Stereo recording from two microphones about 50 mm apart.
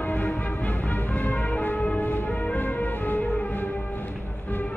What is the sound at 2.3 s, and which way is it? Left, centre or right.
Music, left.